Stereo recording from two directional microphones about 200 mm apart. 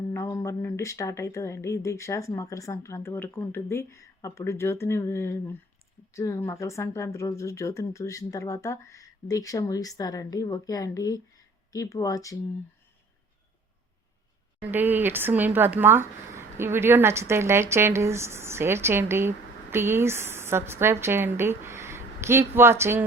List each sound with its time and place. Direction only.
0.1 s speech: 15° left (ahead or behind)
14.6 s a woman's voice: 10° right (ahead or behind)